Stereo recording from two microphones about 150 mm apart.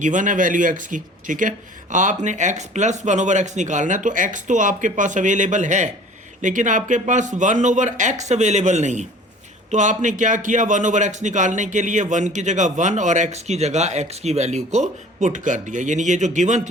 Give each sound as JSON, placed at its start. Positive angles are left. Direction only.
{"t": 0.0, "sound": "a man's voice", "side_deg": -60}